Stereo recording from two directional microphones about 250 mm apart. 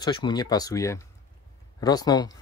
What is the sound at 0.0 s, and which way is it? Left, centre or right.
Speech, centre.